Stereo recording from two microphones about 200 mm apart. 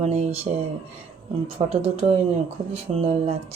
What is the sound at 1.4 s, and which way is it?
A woman's voice, 30° right (ahead or behind).